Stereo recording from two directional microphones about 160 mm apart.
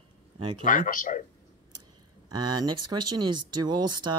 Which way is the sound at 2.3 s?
25° right (ahead or behind).